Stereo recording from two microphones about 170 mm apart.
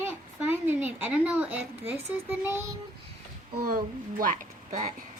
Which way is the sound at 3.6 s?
55° right (ahead or behind).